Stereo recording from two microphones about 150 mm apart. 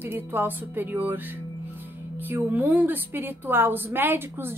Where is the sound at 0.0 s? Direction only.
15° right (ahead or behind).